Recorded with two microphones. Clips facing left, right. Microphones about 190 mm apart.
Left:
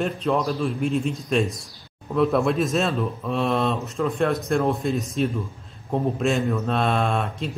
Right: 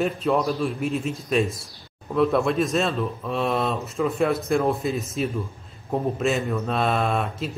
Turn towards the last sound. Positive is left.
turn(degrees=-5)  # may be behind; listen again after turning